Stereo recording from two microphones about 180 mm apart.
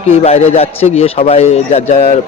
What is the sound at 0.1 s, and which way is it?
A man's voice, 35° left (ahead or behind).